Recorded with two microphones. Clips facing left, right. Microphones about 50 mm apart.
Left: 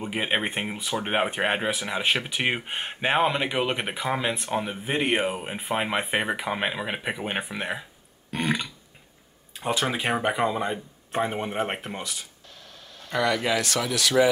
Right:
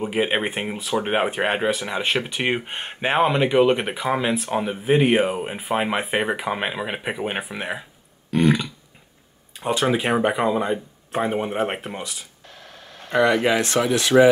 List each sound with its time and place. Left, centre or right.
0.0 s speech: centre
13.1 s speech: right